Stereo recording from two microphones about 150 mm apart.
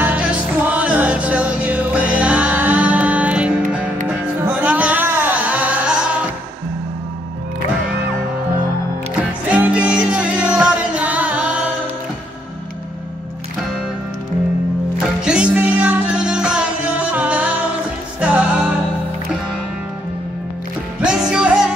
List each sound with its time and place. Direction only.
0.0 s music: 10° right (ahead or behind)
9.5 s music: 10° right (ahead or behind)
15.2 s music: 5° right (ahead or behind)
21.0 s music: 5° right (ahead or behind)